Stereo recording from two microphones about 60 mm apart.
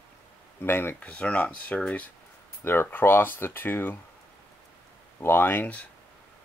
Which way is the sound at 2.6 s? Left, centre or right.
Left.